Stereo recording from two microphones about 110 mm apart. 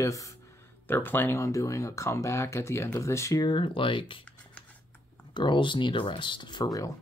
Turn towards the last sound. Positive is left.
turn(degrees=35)  # may be behind; listen again after turning